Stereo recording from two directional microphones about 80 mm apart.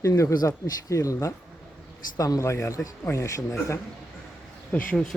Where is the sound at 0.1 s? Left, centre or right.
Left.